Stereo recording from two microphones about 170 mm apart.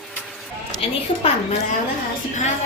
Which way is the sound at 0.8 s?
35° left (ahead or behind).